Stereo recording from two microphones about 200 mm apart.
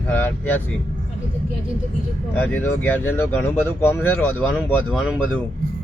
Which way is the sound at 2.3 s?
10° left (ahead or behind).